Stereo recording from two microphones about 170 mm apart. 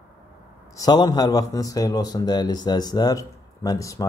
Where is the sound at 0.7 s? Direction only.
25° left (ahead or behind).